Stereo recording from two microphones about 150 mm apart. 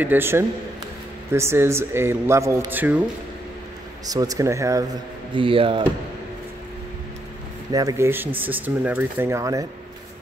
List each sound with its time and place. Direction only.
0.0 s speech: 15° right (ahead or behind)
4.0 s speech: 25° right (ahead or behind)
5.3 s speech: 35° right (ahead or behind)
7.7 s speech: 20° right (ahead or behind)